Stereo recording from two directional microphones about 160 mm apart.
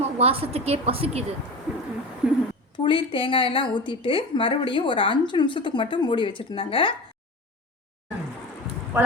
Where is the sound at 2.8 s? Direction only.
30° left (ahead or behind).